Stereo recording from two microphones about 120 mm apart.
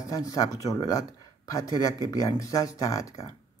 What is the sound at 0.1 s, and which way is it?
Speech, 30° left (ahead or behind).